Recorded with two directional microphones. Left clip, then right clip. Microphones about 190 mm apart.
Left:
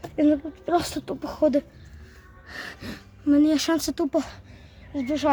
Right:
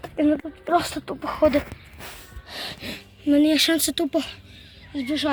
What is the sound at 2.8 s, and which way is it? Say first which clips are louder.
Speech: right 5 dB; 15° left (ahead or behind).